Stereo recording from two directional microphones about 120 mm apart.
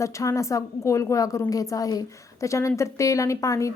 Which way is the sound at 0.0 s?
25° left (ahead or behind).